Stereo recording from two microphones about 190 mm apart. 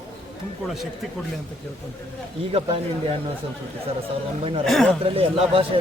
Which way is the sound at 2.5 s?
30° right (ahead or behind).